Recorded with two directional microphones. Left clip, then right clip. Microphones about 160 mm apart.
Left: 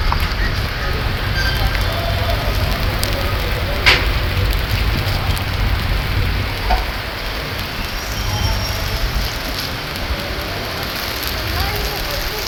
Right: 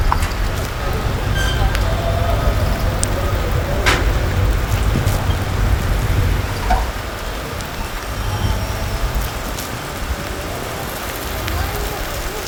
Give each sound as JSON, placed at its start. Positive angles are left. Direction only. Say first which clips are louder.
{"t": 3.9, "sound": "vehicle", "louder": "left 4 dB", "side_deg": -90}